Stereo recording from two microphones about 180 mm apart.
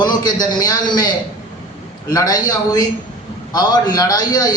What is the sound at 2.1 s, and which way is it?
A man's voice, 20° left (ahead or behind).